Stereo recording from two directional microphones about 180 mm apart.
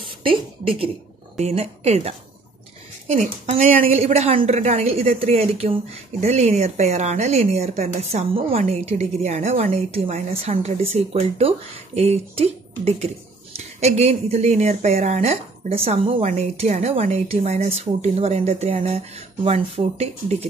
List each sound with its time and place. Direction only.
0.2 s a woman's voice: 30° right (ahead or behind)
3.9 s a woman's voice: 35° right (ahead or behind)